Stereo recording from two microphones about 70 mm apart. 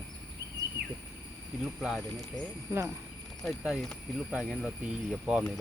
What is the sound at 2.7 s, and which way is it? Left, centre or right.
Speech, right.